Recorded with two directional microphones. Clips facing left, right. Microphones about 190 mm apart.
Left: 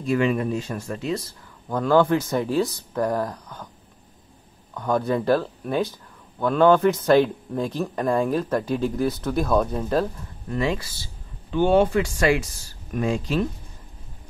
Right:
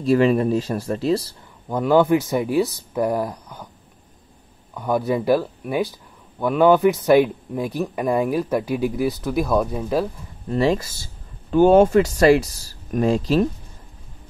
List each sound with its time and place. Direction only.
0.0 s speech: 35° right (ahead or behind)
1.7 s speech: 15° right (ahead or behind)
4.7 s speech: 10° right (ahead or behind)
10.5 s speech: 35° right (ahead or behind)